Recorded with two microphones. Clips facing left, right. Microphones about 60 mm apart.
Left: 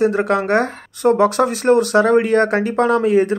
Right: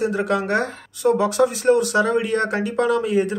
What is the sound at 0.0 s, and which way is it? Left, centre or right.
Speech, left.